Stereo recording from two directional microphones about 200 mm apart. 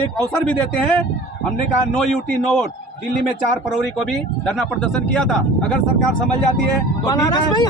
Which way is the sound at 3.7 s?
Centre (ahead or behind).